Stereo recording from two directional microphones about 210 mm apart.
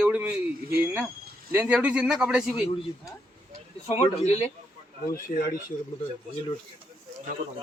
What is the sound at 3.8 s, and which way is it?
Speech, 30° left (ahead or behind).